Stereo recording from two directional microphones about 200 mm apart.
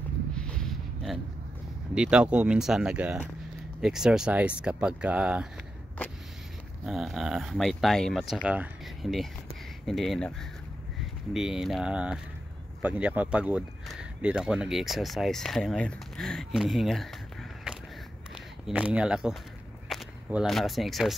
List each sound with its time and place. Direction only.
0.3 s a sound: 5° left (ahead or behind)
2.0 s speech: 5° right (ahead or behind)
6.0 s vehicle: 10° left (ahead or behind)
6.9 s speech: centre (ahead or behind)
11.3 s speech: 5° right (ahead or behind)